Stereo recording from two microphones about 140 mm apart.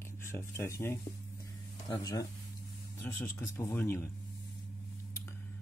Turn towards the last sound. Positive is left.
turn(degrees=20)  # may be behind; listen again after turning